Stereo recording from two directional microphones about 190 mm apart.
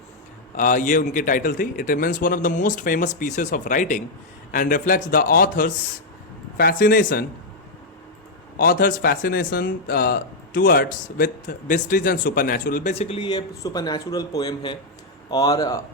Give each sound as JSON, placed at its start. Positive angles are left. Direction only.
{"t": 0.5, "sound": "speech", "side_deg": 45}
{"t": 8.5, "sound": "speech", "side_deg": 50}